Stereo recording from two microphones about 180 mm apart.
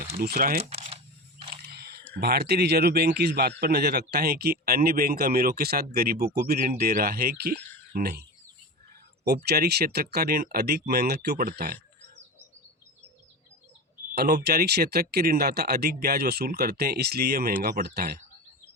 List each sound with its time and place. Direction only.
0.2 s speech: 55° right (ahead or behind)
0.6 s camera: 35° right (ahead or behind)
1.7 s a sound: 65° right (ahead or behind)
2.1 s speech: 60° right (ahead or behind)
9.2 s speech: 65° right (ahead or behind)
14.2 s speech: 60° right (ahead or behind)